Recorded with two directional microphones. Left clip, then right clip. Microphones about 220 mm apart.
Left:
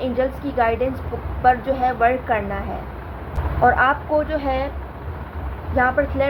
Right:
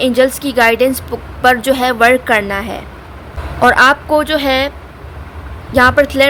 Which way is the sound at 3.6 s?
60° right (ahead or behind).